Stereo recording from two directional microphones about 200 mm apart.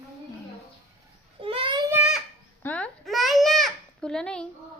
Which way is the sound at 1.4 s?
25° right (ahead or behind).